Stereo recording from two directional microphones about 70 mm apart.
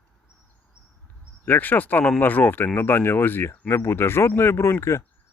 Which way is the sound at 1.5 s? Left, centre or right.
Left.